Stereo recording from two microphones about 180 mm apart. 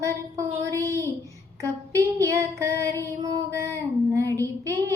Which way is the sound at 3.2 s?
15° right (ahead or behind).